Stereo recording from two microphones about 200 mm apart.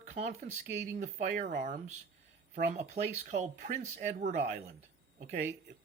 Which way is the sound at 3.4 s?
40° right (ahead or behind).